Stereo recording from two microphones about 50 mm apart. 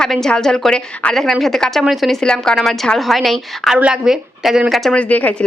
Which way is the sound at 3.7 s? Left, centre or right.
Centre.